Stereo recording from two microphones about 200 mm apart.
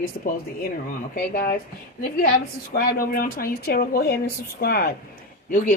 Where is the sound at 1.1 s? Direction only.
50° left (ahead or behind).